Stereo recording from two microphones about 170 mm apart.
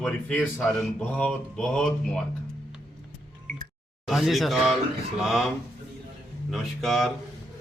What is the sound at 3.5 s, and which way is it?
Music, 50° right (ahead or behind).